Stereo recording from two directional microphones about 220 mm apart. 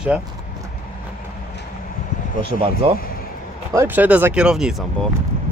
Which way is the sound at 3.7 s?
10° right (ahead or behind).